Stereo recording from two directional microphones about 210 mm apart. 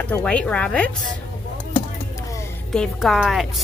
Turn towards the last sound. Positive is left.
turn(degrees=0)  # may be behind; listen again after turning